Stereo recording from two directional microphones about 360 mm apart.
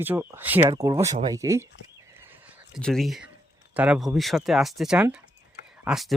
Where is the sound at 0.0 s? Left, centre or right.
Centre.